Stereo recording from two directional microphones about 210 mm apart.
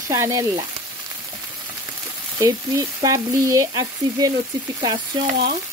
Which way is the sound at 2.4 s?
15° right (ahead or behind).